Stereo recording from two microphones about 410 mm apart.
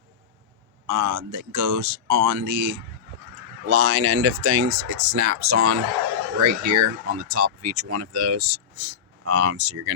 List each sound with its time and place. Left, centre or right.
0.9 s speech: right
3.7 s speech: right